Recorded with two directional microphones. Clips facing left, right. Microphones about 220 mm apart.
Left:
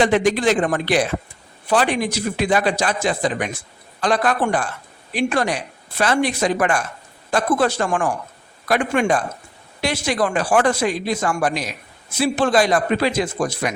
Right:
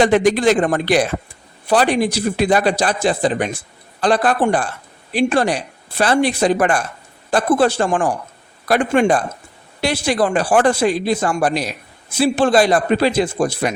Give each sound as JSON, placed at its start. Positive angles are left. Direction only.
{"t": 0.0, "sound": "a man's voice", "side_deg": -40}